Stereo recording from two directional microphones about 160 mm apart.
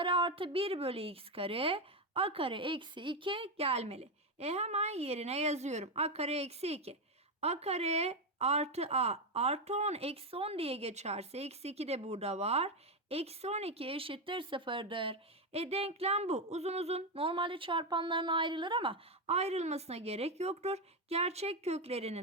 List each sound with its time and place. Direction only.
0.0 s speech: 30° right (ahead or behind)